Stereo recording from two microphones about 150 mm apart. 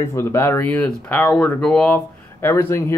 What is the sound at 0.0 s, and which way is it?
Speech, 20° left (ahead or behind).